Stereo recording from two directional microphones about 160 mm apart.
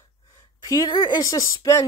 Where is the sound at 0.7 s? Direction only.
30° left (ahead or behind).